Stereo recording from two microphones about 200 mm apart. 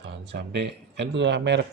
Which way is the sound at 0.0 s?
60° right (ahead or behind).